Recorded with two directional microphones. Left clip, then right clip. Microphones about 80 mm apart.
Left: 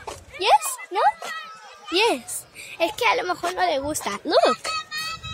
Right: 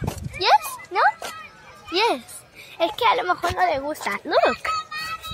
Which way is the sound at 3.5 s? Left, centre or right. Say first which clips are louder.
Right 1 dB; left.